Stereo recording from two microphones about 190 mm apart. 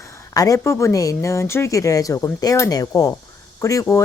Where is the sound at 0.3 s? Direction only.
15° left (ahead or behind).